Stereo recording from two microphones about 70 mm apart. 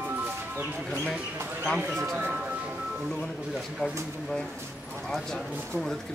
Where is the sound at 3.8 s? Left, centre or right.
Centre.